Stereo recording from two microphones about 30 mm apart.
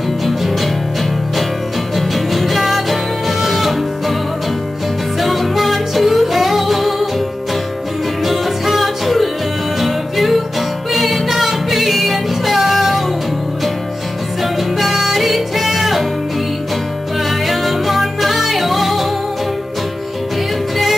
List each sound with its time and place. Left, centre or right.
2.0 s music: centre
5.2 s music: centre
8.2 s music: centre
14.4 s music: centre
17.3 s music: centre